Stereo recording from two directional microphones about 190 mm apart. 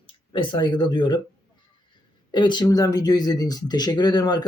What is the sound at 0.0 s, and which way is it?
Speech, 25° left (ahead or behind).